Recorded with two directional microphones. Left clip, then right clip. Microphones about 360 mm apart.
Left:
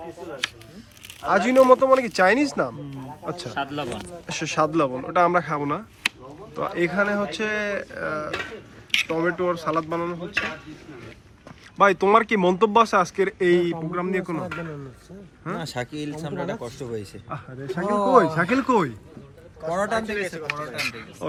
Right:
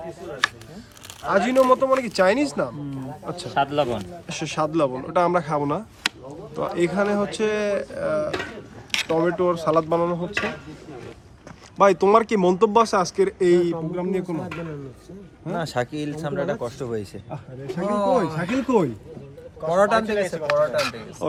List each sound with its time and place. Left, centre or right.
1.3 s speech: centre
3.5 s a man's voice: right
4.3 s speech: centre
11.8 s speech: centre